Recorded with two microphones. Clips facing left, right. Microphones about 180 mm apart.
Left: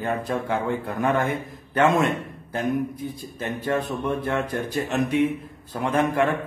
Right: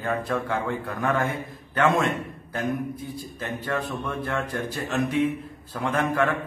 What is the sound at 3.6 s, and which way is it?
A man's voice, 20° left (ahead or behind).